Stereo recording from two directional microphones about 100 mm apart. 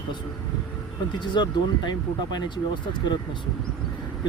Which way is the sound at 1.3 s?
45° left (ahead or behind).